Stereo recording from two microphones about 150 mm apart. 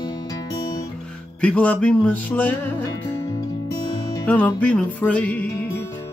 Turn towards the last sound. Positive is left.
turn(degrees=10)  # may be behind; listen again after turning